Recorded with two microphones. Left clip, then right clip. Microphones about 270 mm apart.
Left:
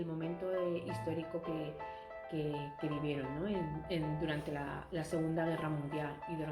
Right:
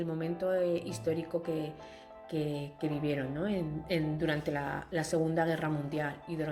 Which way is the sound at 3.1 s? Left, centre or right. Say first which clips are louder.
Right 5 dB; right.